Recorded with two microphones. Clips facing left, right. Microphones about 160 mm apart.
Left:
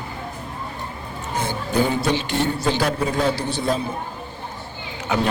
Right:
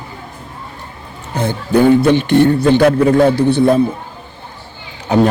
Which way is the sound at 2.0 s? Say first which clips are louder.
Right 11 dB; 55° right (ahead or behind).